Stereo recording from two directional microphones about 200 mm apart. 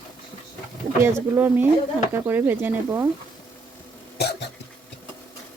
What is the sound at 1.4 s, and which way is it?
Speech, 10° right (ahead or behind).